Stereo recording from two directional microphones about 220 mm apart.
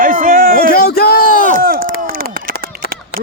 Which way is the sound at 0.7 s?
45° left (ahead or behind).